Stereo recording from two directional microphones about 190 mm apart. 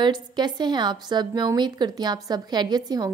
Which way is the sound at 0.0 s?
20° right (ahead or behind).